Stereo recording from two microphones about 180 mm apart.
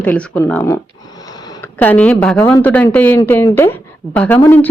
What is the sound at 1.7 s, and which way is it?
Speech, 10° left (ahead or behind).